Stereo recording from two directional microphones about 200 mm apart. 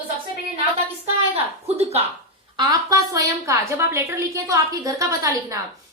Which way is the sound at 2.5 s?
15° right (ahead or behind).